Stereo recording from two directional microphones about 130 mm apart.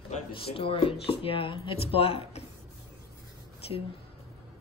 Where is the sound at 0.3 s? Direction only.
45° left (ahead or behind).